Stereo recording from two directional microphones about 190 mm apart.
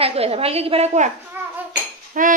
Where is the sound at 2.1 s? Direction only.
45° right (ahead or behind).